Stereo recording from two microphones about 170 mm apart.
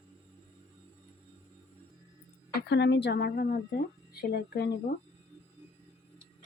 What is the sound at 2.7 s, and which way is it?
Speech, 90° left.